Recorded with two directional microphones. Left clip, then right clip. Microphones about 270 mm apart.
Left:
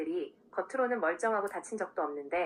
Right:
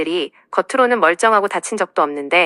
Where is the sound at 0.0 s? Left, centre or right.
Right.